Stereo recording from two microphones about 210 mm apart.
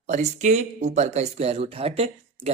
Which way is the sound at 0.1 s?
35° right (ahead or behind).